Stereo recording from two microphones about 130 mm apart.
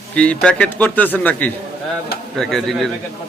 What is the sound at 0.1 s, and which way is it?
A man's voice, 10° left (ahead or behind).